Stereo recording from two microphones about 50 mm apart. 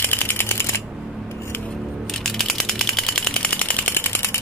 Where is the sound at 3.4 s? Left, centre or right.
Left.